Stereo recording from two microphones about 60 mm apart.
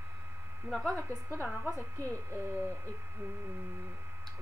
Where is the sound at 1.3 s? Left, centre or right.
Left.